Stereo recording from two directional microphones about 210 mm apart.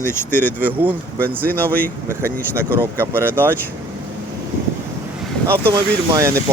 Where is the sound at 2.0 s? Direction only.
10° right (ahead or behind).